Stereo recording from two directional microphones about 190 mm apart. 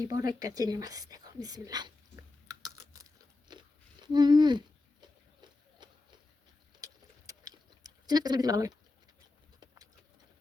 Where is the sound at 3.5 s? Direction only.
25° right (ahead or behind).